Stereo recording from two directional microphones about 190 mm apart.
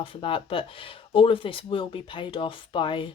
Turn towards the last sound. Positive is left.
turn(degrees=25)  # may be behind; listen again after turning